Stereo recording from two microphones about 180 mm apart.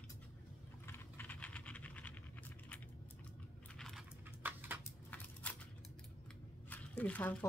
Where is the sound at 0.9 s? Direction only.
10° left (ahead or behind).